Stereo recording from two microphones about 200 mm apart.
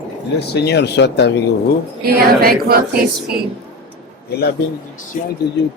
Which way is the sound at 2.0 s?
50° right (ahead or behind).